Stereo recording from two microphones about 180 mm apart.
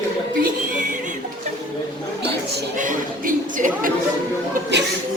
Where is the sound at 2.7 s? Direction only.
45° right (ahead or behind).